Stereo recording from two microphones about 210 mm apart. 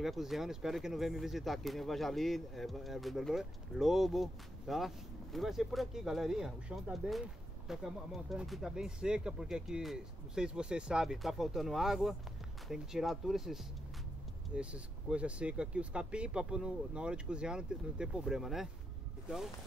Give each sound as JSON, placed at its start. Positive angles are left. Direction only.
{"t": 0.0, "sound": "speech", "side_deg": 0}